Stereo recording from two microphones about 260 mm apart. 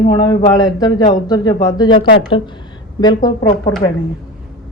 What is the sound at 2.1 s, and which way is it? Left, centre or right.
Speech, left.